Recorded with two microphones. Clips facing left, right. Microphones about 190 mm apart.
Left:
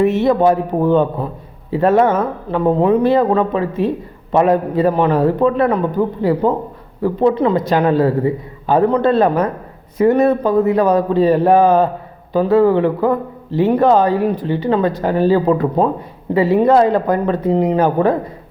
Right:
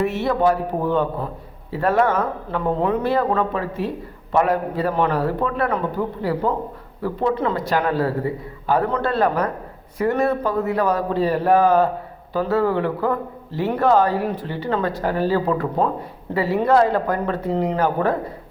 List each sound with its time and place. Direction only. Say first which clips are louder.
0.0 s speech: left 6 dB; 20° left (ahead or behind)